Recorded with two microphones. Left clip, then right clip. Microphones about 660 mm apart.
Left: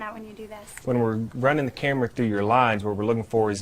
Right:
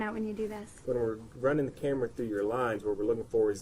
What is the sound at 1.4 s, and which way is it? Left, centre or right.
Speech, left.